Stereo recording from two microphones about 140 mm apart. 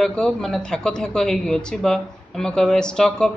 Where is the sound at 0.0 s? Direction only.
5° left (ahead or behind).